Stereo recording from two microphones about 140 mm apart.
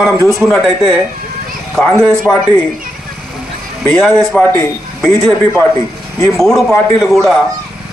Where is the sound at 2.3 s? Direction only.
20° left (ahead or behind).